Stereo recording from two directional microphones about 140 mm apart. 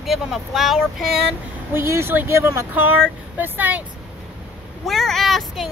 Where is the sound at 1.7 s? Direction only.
15° right (ahead or behind).